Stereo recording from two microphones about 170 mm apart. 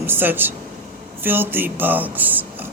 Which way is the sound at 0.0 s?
10° right (ahead or behind).